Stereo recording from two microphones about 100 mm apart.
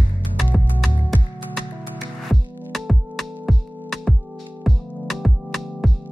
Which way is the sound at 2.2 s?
Centre (ahead or behind).